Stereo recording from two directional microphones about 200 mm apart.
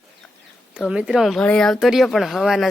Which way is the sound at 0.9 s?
5° right (ahead or behind).